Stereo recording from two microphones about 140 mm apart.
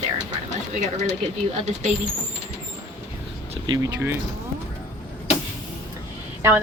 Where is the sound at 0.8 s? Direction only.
60° right (ahead or behind).